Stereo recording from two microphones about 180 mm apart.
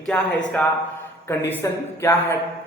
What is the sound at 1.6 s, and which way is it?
Speech, 15° left (ahead or behind).